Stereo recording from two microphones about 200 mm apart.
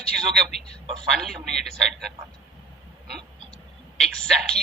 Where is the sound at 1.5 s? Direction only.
Centre (ahead or behind).